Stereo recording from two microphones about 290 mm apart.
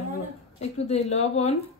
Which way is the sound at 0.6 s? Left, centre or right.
Left.